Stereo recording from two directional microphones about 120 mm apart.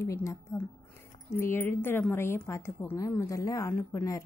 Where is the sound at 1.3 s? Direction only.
20° left (ahead or behind).